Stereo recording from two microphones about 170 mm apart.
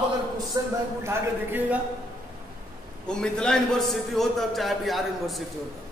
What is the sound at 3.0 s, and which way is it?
A man's voice, 5° left (ahead or behind).